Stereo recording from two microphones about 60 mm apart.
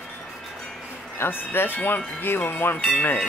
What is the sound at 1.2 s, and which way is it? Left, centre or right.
Speech, left.